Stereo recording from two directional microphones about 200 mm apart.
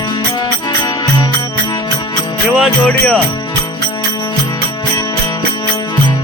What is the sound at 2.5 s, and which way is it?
Music, centre (ahead or behind).